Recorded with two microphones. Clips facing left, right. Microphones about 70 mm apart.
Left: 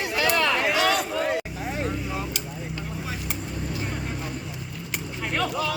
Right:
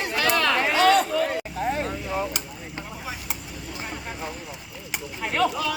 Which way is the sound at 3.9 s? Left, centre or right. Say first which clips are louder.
Left 1 dB; centre.